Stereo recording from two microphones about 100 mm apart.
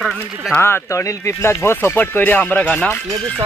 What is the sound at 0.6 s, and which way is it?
Speech, 25° left (ahead or behind).